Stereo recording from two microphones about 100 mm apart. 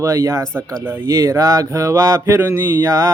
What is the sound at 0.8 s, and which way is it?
Mantra, 25° right (ahead or behind).